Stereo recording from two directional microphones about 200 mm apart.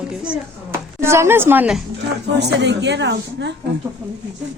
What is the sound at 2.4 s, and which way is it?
A woman's voice, 60° right (ahead or behind).